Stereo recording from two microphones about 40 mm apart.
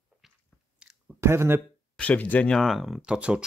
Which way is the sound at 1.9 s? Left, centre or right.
Left.